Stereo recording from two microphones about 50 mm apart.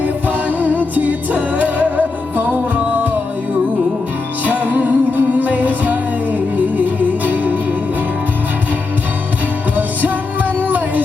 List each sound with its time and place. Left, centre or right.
0.0 s music: right
4.4 s music: right
10.6 s music: right